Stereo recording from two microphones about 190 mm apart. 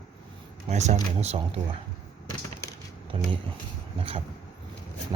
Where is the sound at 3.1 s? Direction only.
30° right (ahead or behind).